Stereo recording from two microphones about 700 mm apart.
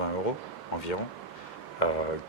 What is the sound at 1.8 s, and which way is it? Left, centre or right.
Speech, left.